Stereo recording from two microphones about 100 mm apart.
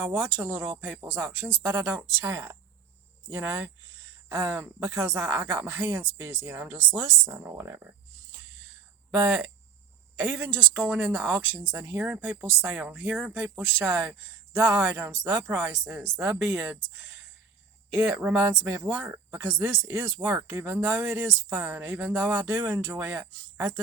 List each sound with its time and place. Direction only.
0.2 s speech: 15° right (ahead or behind)
9.2 s speech: 10° right (ahead or behind)
17.9 s speech: 15° right (ahead or behind)
23.0 s speech: 10° right (ahead or behind)